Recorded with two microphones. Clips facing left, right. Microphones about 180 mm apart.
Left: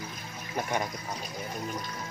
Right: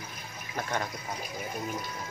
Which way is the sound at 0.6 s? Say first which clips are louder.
Left 2 dB; 15° left (ahead or behind).